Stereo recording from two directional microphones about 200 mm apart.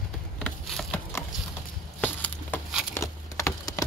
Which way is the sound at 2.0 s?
5° left (ahead or behind).